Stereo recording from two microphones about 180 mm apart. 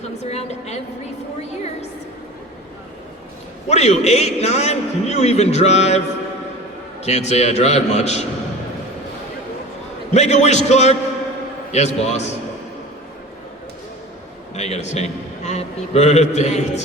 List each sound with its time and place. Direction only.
0.2 s a woman's voice: 35° left (ahead or behind)
3.7 s a man's voice: 35° left (ahead or behind)
7.0 s a man's voice: 35° left (ahead or behind)
10.2 s a man's voice: 40° left (ahead or behind)
14.5 s a man's voice: 40° left (ahead or behind)